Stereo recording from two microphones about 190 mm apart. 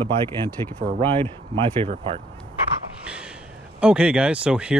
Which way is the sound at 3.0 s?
5° right (ahead or behind).